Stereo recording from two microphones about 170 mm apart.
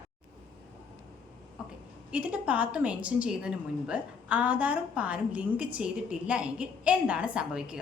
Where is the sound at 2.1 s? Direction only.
10° right (ahead or behind).